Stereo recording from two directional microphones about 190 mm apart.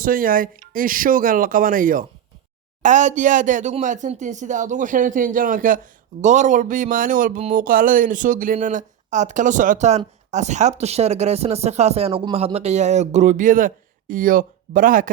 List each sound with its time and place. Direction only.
0.0 s speech: 45° right (ahead or behind)